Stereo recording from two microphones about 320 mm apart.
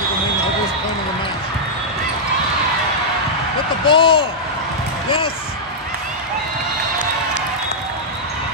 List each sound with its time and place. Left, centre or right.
3.8 s speech: centre